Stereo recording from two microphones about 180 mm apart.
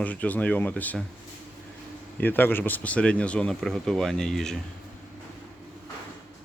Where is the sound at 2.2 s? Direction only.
10° left (ahead or behind).